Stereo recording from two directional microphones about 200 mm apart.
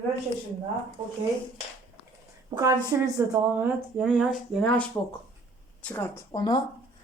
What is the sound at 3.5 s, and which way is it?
Speech, 5° right (ahead or behind).